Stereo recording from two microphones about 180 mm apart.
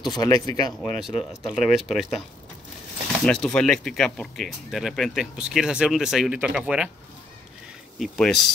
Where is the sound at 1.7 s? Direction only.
Centre (ahead or behind).